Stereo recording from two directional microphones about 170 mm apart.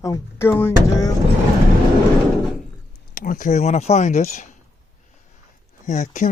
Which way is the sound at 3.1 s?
55° left (ahead or behind).